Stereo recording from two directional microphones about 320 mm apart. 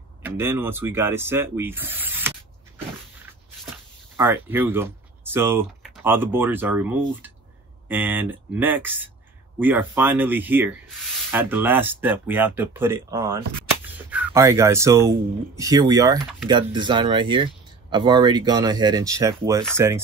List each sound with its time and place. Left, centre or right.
0.2 s speech: centre
3.7 s speech: centre